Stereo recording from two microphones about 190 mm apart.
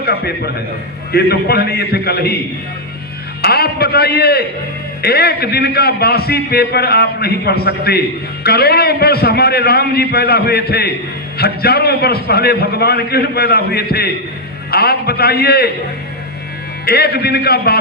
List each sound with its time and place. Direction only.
0.0 s a man's voice: 55° left (ahead or behind)
3.4 s a man's voice: 55° left (ahead or behind)
16.8 s a man's voice: 55° left (ahead or behind)